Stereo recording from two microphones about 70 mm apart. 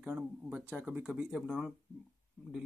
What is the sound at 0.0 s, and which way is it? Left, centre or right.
Speech, right.